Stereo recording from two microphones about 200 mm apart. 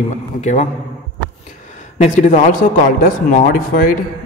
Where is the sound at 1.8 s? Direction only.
40° left (ahead or behind).